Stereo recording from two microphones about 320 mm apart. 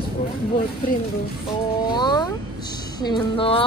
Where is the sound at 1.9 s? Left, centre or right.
Centre.